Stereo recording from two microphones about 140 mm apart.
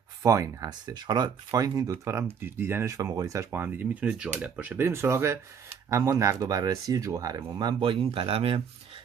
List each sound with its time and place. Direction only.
0.2 s speech: 25° right (ahead or behind); by 8.6 s 45° right (ahead or behind)